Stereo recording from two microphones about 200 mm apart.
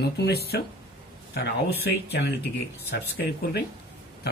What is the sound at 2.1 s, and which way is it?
Speech, 55° left (ahead or behind).